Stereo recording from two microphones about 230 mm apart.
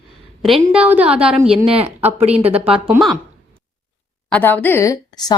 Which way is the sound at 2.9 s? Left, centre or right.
Centre.